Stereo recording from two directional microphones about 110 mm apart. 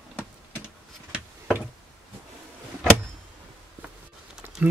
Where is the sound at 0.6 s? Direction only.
10° right (ahead or behind).